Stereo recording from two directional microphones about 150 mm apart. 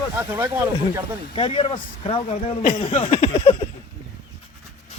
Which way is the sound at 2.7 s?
45° left (ahead or behind).